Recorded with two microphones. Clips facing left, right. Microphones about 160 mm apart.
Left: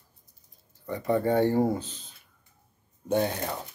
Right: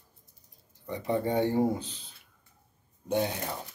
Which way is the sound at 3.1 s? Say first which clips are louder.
Left 3 dB; 45° left (ahead or behind).